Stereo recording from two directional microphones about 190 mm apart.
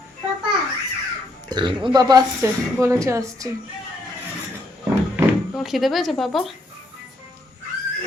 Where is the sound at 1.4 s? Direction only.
25° right (ahead or behind).